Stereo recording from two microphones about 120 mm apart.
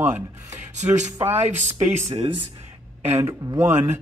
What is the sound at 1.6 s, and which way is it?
Speech, 65° right (ahead or behind).